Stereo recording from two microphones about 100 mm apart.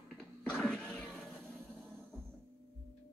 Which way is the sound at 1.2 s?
5° left (ahead or behind).